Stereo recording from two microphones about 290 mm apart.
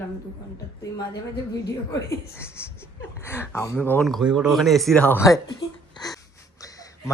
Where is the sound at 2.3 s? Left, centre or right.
Centre.